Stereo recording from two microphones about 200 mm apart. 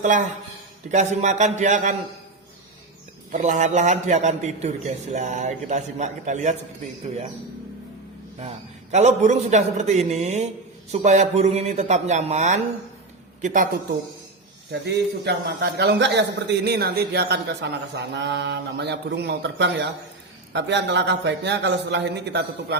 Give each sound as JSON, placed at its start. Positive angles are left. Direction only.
{"t": 0.0, "sound": "a man's voice", "side_deg": -40}
{"t": 3.3, "sound": "a man's voice", "side_deg": -40}
{"t": 8.4, "sound": "a man's voice", "side_deg": -35}
{"t": 14.7, "sound": "a man's voice", "side_deg": -55}